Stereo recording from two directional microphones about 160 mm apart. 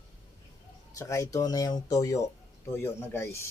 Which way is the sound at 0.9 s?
20° left (ahead or behind).